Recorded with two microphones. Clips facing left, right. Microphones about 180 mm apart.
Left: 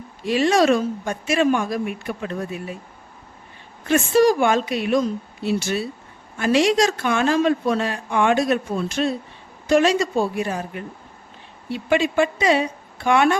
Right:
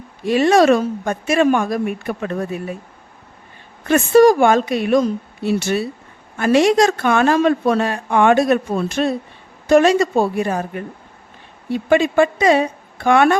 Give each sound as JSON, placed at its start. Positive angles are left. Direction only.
{"t": 0.3, "sound": "a woman's voice", "side_deg": -55}
{"t": 3.8, "sound": "a woman's voice", "side_deg": -55}